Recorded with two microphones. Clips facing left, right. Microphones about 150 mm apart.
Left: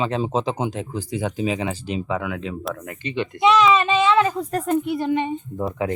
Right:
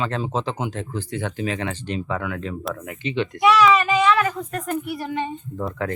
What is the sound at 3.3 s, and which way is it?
Speech, 20° left (ahead or behind).